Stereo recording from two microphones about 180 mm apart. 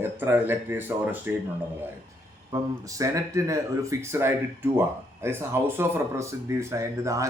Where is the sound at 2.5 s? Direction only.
20° right (ahead or behind).